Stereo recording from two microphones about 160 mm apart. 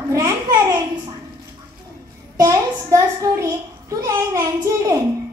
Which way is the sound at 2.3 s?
20° right (ahead or behind).